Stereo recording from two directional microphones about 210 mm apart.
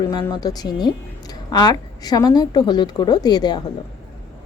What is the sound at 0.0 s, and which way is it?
Speech, 20° left (ahead or behind).